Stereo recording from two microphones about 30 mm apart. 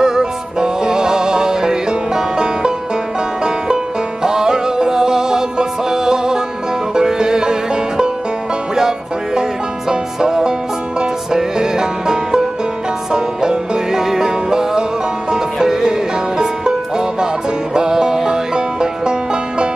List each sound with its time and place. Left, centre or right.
0.0 s music: right
8.7 s music: centre